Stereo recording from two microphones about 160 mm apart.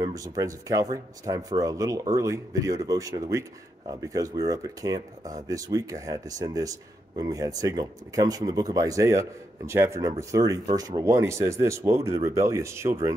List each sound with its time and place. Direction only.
0.0 s speech: 20° right (ahead or behind)